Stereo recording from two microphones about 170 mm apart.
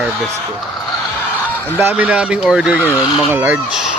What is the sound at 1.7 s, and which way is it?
Speech, 10° right (ahead or behind).